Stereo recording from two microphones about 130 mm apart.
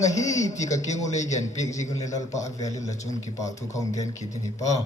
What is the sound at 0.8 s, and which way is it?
A man's voice, 65° left (ahead or behind).